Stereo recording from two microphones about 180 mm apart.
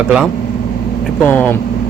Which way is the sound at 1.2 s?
10° left (ahead or behind).